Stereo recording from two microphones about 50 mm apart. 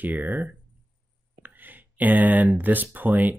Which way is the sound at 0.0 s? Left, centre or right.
Right.